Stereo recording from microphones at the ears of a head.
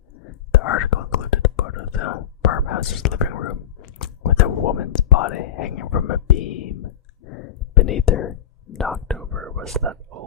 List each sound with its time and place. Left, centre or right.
0.1 s whispering: left
9.5 s whispering: right